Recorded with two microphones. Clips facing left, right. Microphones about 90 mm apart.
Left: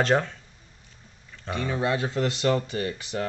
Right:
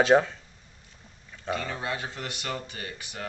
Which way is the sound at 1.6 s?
25° left (ahead or behind).